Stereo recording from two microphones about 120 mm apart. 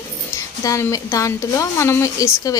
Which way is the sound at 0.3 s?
25° left (ahead or behind).